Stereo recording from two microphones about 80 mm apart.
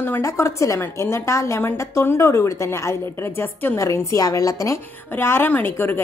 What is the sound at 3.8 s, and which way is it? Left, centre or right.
Speech, left.